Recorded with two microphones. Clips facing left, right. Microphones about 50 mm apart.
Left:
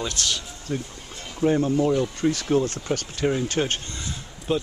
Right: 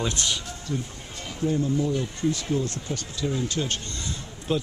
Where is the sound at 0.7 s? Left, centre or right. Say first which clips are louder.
Left 2 dB; left.